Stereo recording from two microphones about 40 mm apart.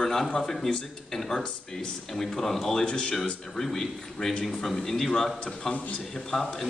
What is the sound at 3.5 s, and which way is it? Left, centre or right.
A man's voice, centre.